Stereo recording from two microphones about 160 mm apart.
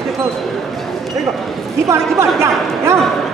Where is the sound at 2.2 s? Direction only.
15° right (ahead or behind).